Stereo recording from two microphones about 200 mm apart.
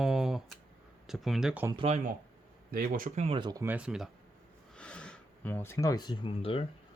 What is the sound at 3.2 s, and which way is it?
Speech, 25° right (ahead or behind).